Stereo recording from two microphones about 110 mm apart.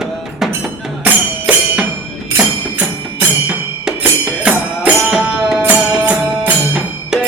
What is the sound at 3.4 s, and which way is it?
Music, 10° right (ahead or behind).